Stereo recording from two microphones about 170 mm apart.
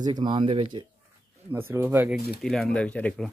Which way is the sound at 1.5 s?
15° right (ahead or behind).